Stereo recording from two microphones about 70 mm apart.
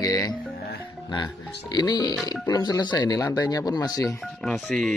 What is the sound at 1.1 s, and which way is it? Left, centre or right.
Speech, left.